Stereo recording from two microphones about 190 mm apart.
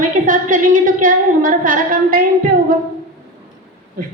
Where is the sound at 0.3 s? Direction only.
45° right (ahead or behind).